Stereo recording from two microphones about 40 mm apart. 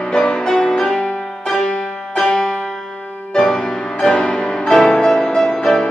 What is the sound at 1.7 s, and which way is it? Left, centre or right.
Music, left.